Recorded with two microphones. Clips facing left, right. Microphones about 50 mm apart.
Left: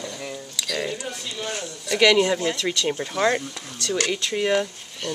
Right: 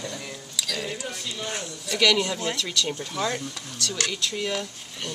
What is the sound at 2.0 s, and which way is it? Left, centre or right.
Speech, centre.